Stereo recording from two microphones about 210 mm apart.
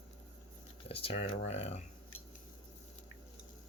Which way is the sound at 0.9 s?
25° left (ahead or behind).